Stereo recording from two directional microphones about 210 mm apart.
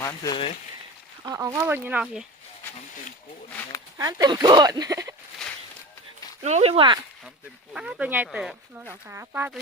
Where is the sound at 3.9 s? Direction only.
15° right (ahead or behind).